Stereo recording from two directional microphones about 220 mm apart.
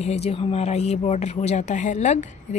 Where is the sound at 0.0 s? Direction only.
30° left (ahead or behind).